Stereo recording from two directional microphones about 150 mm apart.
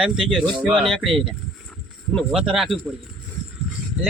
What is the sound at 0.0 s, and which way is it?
Speech, centre (ahead or behind).